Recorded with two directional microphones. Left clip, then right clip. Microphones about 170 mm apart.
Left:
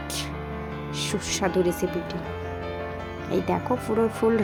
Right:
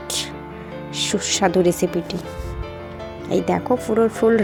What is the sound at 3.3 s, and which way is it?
Speech, 20° right (ahead or behind).